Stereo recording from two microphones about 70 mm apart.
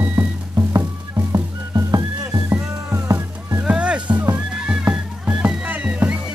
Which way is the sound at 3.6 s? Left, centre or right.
Centre.